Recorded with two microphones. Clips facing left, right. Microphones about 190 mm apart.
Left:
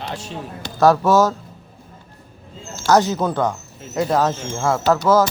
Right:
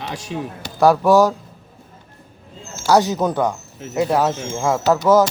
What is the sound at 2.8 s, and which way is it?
Speech, 15° right (ahead or behind).